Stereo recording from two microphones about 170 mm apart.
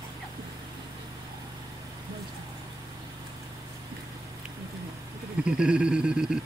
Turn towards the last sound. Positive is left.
turn(degrees=-5)  # may be behind; listen again after turning